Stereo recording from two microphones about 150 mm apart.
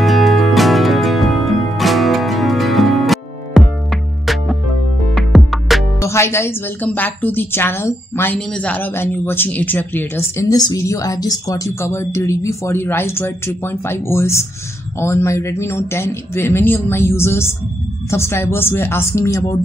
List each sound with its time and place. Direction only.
0.0 s music: centre (ahead or behind)
5.9 s speech: 20° left (ahead or behind)